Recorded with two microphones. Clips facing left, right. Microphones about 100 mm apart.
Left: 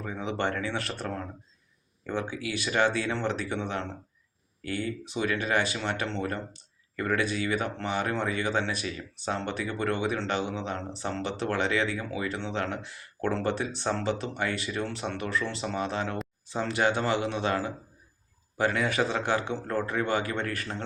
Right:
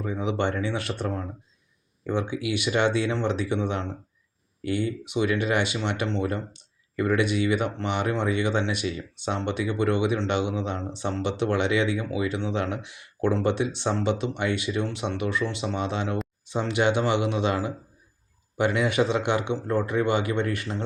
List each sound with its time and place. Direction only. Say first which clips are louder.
0.0 s speech: right 4 dB; 20° right (ahead or behind)
2.3 s speech: right 4 dB; 20° right (ahead or behind)
11.8 s speech: right 4 dB; 40° left (ahead or behind)
12.4 s speech: right 4 dB; 15° right (ahead or behind)